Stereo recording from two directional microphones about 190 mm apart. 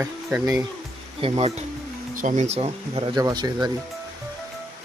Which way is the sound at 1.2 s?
35° right (ahead or behind).